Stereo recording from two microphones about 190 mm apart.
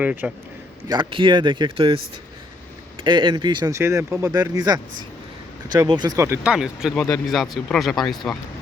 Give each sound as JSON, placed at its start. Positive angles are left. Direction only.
{"t": 0.0, "sound": "speech", "side_deg": -5}
{"t": 0.9, "sound": "speech", "side_deg": -25}
{"t": 3.0, "sound": "speech", "side_deg": -25}